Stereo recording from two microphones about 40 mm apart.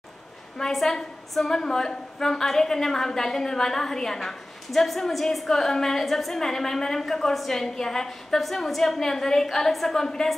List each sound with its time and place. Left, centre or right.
0.6 s a woman's voice: centre